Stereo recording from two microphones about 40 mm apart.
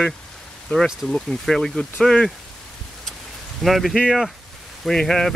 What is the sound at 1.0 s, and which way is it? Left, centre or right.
Speech, centre.